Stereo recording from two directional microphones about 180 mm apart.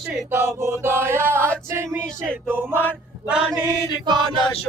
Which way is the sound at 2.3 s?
10° right (ahead or behind).